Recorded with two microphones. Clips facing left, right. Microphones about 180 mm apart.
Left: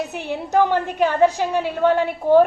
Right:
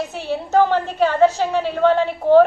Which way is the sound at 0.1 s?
15° left (ahead or behind).